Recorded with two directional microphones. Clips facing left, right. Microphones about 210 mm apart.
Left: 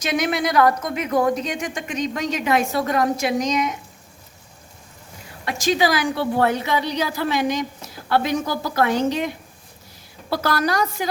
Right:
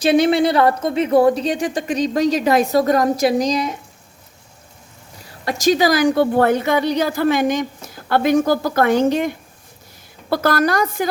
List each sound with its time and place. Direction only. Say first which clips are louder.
0.0 s speech: right 8 dB; 30° right (ahead or behind)
5.2 s a woman's voice: right 6 dB; 40° right (ahead or behind)